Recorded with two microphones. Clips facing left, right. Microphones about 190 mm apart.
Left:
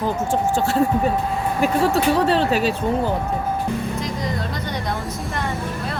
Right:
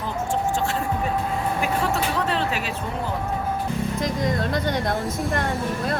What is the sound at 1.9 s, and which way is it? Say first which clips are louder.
Speech: left 6 dB; 35° left (ahead or behind).